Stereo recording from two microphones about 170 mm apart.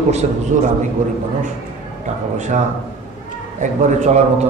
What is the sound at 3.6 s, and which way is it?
Speech, 45° right (ahead or behind).